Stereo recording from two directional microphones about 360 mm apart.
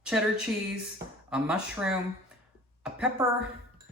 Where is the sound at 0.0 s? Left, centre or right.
Centre.